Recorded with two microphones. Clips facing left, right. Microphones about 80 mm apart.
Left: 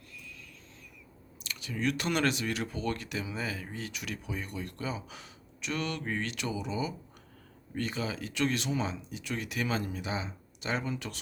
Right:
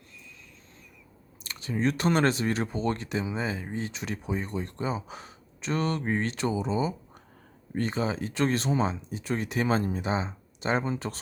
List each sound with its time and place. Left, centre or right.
1.5 s speech: right